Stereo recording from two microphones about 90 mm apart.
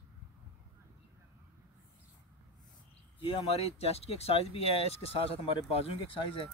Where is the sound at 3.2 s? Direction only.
75° left (ahead or behind); by 6.4 s 90° left.